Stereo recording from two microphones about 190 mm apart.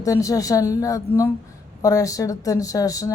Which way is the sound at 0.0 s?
15° left (ahead or behind).